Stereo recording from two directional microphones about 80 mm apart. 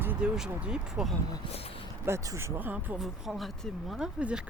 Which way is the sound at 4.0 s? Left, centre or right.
Centre.